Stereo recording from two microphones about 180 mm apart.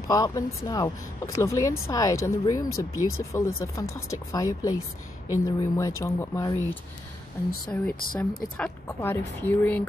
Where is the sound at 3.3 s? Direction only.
15° left (ahead or behind).